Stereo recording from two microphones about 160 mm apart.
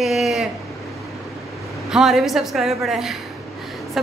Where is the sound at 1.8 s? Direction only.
Centre (ahead or behind).